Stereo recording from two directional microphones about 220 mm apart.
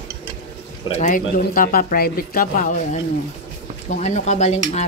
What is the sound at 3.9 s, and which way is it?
Speech, 30° left (ahead or behind).